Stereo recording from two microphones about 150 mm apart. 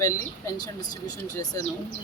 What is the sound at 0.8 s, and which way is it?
Speech, 25° left (ahead or behind).